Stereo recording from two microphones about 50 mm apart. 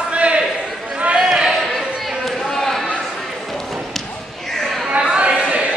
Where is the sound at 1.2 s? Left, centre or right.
Centre.